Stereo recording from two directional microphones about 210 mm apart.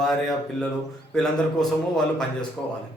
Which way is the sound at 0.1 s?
Centre (ahead or behind).